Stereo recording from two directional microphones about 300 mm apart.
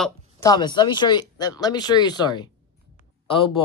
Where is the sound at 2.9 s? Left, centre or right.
Centre.